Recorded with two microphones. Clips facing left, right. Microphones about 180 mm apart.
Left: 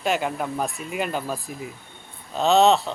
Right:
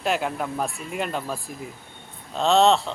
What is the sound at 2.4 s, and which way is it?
Speech, centre (ahead or behind).